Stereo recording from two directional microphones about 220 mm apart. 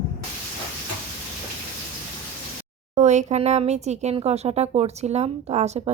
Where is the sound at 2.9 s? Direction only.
30° right (ahead or behind).